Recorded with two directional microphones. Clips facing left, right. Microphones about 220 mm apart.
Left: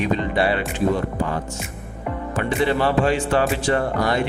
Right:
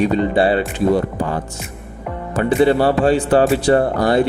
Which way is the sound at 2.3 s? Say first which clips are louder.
Right 7 dB; 35° right (ahead or behind).